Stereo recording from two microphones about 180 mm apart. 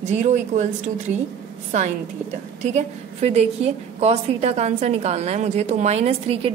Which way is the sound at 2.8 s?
40° right (ahead or behind).